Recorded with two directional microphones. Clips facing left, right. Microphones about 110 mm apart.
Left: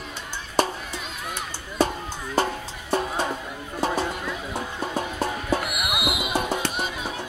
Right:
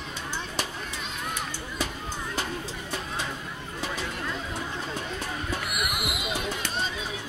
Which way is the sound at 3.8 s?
40° left (ahead or behind).